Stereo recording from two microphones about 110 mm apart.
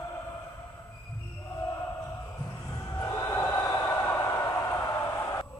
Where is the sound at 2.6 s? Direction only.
25° left (ahead or behind).